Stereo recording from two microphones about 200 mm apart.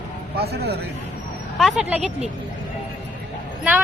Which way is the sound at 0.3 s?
55° right (ahead or behind).